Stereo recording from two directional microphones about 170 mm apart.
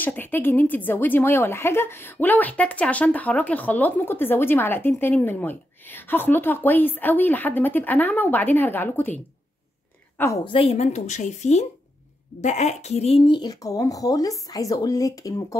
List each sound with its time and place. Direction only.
0.0 s a woman's voice: 10° left (ahead or behind)
10.1 s a woman's voice: 15° left (ahead or behind)
10.4 s speech: 35° left (ahead or behind)